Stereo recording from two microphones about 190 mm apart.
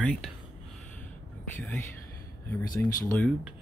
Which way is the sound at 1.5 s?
10° left (ahead or behind).